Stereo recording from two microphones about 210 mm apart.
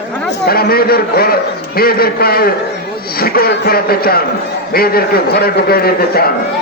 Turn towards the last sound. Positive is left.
turn(degrees=45)  # may be behind; listen again after turning